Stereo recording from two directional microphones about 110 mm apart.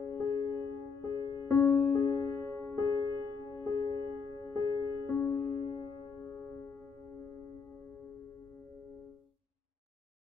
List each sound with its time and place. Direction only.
0.1 s music: 30° left (ahead or behind)